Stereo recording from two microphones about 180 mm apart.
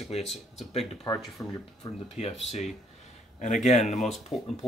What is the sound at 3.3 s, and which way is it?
Speech, 40° left (ahead or behind).